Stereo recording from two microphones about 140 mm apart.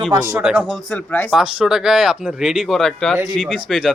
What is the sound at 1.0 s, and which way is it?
Speech, 10° left (ahead or behind).